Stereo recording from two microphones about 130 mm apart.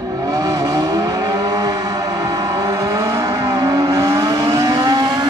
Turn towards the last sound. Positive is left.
turn(degrees=-35)  # may be behind; listen again after turning